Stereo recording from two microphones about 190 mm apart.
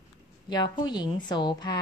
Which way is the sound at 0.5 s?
25° left (ahead or behind).